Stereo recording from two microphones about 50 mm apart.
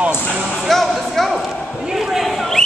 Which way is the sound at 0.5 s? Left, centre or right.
Centre.